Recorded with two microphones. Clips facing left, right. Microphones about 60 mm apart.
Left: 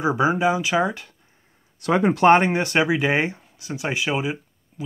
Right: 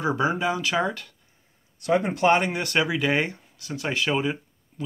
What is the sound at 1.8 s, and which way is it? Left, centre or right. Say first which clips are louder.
Speech: left 3 dB; left.